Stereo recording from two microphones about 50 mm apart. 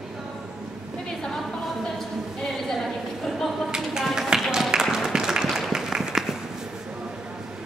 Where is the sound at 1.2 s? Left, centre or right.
Centre.